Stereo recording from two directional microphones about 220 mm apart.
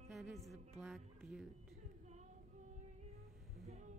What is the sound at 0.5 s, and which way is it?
Speech, centre (ahead or behind).